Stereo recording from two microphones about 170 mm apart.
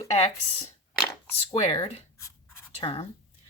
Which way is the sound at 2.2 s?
15° left (ahead or behind).